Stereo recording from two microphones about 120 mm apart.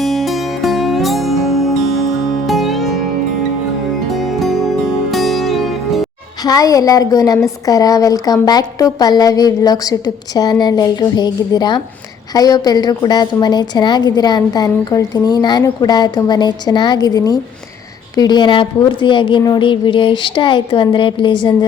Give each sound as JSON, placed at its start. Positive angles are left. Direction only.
{"t": 0.0, "sound": "music", "side_deg": 0}
{"t": 4.1, "sound": "music", "side_deg": 0}
{"t": 6.4, "sound": "a woman's voice", "side_deg": 30}